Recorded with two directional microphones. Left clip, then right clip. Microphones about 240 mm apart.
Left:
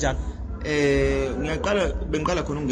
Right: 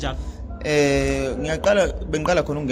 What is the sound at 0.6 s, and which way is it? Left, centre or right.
A man's voice, right.